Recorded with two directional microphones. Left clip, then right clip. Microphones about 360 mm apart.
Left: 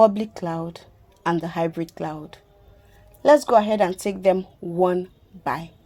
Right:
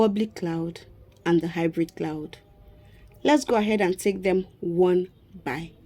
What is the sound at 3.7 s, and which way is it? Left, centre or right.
Speech, left.